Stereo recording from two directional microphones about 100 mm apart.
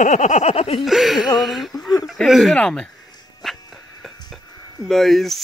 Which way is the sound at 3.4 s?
Centre (ahead or behind).